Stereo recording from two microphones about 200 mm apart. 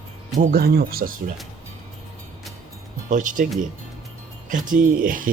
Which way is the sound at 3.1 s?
40° right (ahead or behind).